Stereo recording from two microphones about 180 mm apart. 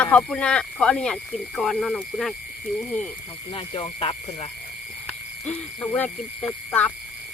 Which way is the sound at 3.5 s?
30° left (ahead or behind).